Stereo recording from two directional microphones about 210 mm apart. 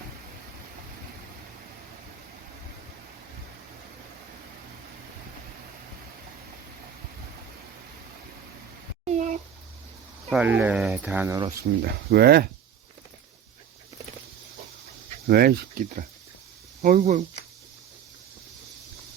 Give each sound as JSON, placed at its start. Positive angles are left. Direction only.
{"t": 9.0, "sound": "a sound", "side_deg": -35}
{"t": 10.2, "sound": "speech", "side_deg": -5}
{"t": 11.9, "sound": "speech", "side_deg": -50}
{"t": 15.3, "sound": "speech", "side_deg": -45}